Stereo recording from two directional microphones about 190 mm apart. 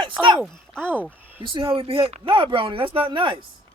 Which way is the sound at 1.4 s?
25° right (ahead or behind).